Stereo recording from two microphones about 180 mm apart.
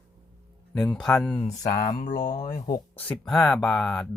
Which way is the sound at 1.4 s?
40° left (ahead or behind).